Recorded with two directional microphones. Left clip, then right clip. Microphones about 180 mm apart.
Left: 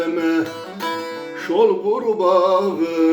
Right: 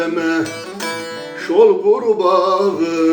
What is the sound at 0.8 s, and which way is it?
Music, 25° right (ahead or behind).